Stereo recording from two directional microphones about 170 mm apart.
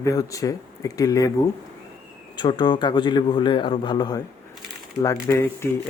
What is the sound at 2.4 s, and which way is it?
Speech, 25° left (ahead or behind).